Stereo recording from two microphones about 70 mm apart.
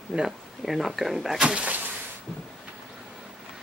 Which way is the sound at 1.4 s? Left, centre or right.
Centre.